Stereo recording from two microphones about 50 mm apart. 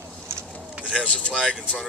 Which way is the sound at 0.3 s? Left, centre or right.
Right.